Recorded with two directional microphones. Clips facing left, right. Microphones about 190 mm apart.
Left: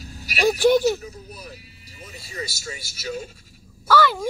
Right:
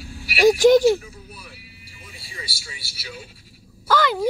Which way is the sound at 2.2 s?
45° left (ahead or behind).